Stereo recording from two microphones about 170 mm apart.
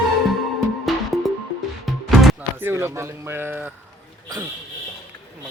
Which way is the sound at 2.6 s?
15° right (ahead or behind).